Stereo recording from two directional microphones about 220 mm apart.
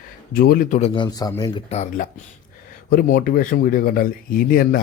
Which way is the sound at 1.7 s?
30° left (ahead or behind).